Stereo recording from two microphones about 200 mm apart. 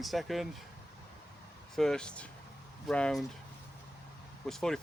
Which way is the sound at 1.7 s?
5° left (ahead or behind).